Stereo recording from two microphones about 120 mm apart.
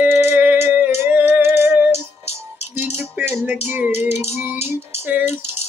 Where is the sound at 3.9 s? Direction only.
60° left (ahead or behind).